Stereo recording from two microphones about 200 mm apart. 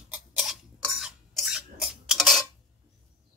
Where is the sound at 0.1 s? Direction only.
5° right (ahead or behind).